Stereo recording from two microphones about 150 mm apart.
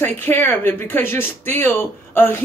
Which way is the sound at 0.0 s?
15° left (ahead or behind).